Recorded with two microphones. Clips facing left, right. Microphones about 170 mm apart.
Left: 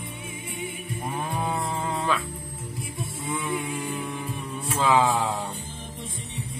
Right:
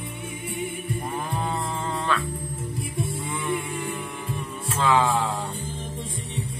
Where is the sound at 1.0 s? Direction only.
10° left (ahead or behind).